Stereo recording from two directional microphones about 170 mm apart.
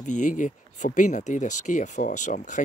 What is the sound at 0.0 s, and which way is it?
Speech, 45° left (ahead or behind).